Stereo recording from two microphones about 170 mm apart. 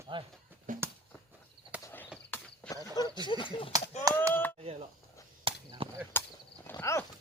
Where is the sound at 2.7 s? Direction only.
20° left (ahead or behind).